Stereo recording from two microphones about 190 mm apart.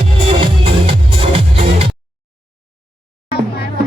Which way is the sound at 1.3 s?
30° right (ahead or behind).